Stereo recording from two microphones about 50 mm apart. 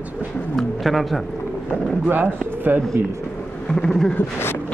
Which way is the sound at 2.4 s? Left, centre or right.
Right.